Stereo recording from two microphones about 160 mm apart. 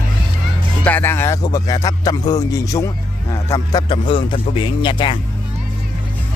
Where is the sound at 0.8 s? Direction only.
15° left (ahead or behind); by 5.1 s 30° left (ahead or behind).